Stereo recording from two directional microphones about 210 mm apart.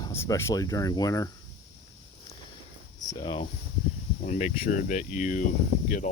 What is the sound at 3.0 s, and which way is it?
Speech, 20° left (ahead or behind).